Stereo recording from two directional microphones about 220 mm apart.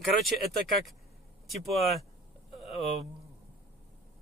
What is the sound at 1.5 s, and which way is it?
Speech, centre (ahead or behind).